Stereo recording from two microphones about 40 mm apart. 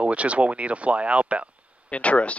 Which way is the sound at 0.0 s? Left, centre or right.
Right.